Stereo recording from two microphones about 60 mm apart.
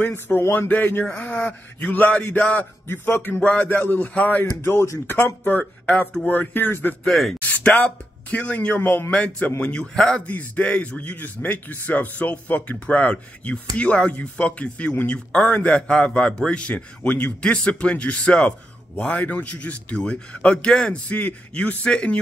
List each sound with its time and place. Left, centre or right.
0.0 s a man's voice: left
1.0 s a man's voice: centre; by 4.5 s left
4.6 s speech: left
5.0 s a man's voice: left
7.1 s speech: centre
7.4 s a man's voice: left